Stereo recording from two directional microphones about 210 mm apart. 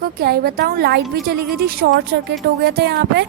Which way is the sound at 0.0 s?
45° right (ahead or behind).